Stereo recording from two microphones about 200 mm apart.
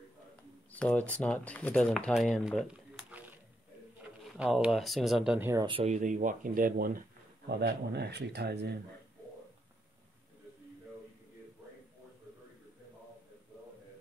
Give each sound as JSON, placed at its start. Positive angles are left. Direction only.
{"t": 0.7, "sound": "speech", "side_deg": 5}
{"t": 4.4, "sound": "speech", "side_deg": -5}
{"t": 5.7, "sound": "speech", "side_deg": -25}
{"t": 5.9, "sound": "speech", "side_deg": -40}
{"t": 7.4, "sound": "speech", "side_deg": -55}